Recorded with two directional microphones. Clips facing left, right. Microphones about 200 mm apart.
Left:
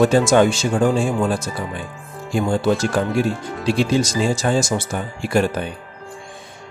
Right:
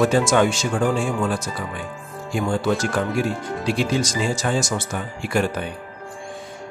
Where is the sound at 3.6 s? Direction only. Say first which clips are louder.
Left 4 dB; 30° left (ahead or behind).